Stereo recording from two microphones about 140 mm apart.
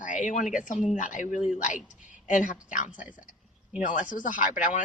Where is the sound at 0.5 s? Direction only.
65° left (ahead or behind).